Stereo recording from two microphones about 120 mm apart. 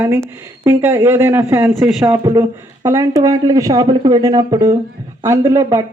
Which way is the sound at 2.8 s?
25° right (ahead or behind).